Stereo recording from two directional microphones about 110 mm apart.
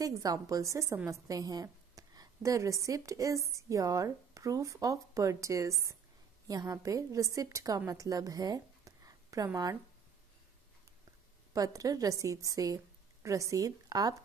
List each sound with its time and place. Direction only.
0.0 s a woman's voice: 35° right (ahead or behind)
11.5 s a woman's voice: 30° right (ahead or behind)